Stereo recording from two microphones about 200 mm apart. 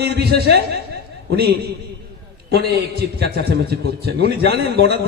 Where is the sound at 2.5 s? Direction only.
55° right (ahead or behind).